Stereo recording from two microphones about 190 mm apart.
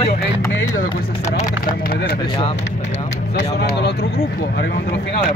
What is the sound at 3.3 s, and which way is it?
Speech, 65° left (ahead or behind).